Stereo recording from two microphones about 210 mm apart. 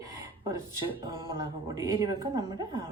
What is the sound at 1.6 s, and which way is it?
A woman's voice, 15° right (ahead or behind).